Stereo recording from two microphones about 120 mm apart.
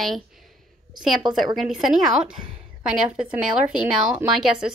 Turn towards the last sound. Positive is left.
turn(degrees=-5)  # may be behind; listen again after turning